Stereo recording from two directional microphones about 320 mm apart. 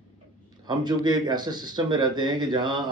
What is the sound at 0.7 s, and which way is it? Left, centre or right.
Speech, centre.